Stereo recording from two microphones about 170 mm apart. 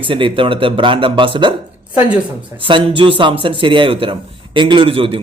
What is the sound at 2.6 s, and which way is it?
Speech, 30° right (ahead or behind).